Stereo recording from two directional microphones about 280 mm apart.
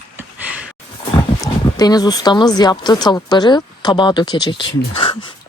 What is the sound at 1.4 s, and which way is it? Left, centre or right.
Speech, centre.